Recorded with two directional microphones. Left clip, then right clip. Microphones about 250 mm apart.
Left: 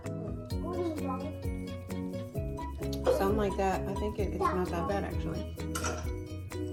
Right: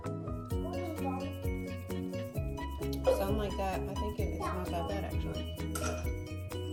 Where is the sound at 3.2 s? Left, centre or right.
Centre.